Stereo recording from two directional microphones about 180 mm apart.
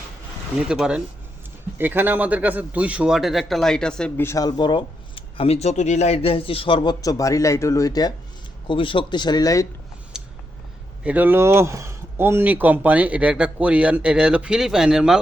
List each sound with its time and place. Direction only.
0.7 s a man's voice: 5° right (ahead or behind); by 9.6 s 20° left (ahead or behind)
10.1 s a sound: 5° right (ahead or behind)
11.0 s speech: 10° right (ahead or behind)